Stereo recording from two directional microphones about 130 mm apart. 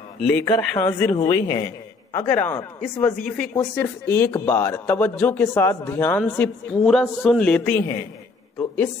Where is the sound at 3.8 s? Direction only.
20° left (ahead or behind).